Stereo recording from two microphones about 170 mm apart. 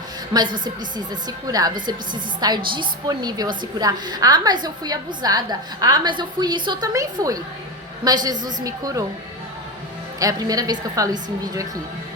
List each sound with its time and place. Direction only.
0.3 s a woman's voice: 25° right (ahead or behind)
10.2 s a woman's voice: 20° right (ahead or behind)